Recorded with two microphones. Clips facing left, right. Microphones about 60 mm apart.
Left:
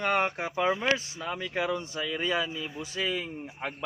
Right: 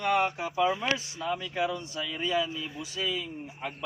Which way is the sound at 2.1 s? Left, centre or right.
Left.